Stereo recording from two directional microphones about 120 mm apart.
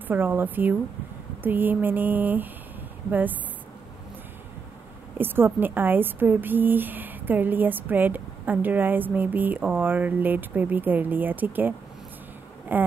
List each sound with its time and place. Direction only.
0.1 s speech: 15° right (ahead or behind)
5.1 s speech: 15° right (ahead or behind)